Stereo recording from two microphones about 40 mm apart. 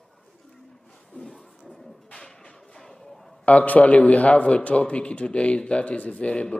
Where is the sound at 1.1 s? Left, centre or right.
Centre.